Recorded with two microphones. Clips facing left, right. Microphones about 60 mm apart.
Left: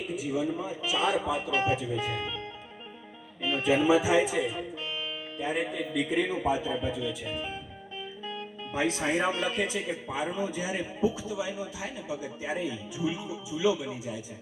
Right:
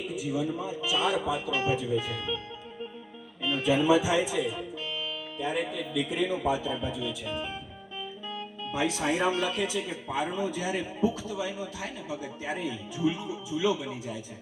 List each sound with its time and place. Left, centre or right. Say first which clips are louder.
0.2 s a man's voice: even; left
3.4 s speech: even; left
6.9 s a man's voice: even; centre
8.7 s speech: even; left
10.1 s a man's voice: right 3 dB; centre